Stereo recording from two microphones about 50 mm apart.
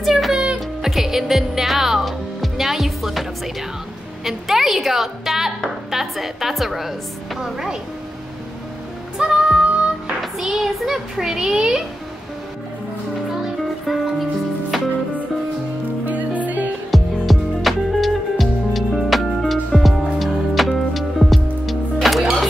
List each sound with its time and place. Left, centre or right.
0.0 s music: centre
0.4 s music: centre
4.2 s a woman's voice: centre
9.2 s music: centre
10.2 s a woman's voice: centre
13.8 s music: centre
16.1 s music: right
16.9 s music: centre